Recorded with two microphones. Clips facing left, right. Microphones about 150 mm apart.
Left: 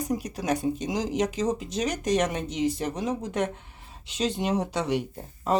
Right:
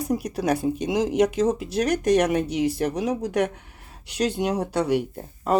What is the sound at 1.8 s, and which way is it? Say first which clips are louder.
Speech: right 7 dB; 65° right (ahead or behind).